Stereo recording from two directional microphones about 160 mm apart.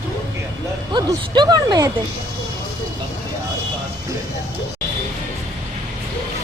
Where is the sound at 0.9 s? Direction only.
30° right (ahead or behind).